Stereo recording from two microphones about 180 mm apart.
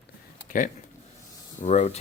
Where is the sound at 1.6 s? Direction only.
35° left (ahead or behind).